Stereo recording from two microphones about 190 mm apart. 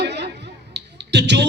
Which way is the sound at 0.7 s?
65° right (ahead or behind).